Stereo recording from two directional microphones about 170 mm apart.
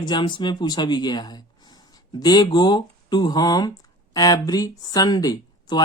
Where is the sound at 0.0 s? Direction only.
25° left (ahead or behind).